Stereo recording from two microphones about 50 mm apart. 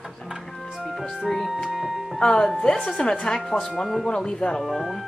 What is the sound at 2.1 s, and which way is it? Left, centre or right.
Speech, centre.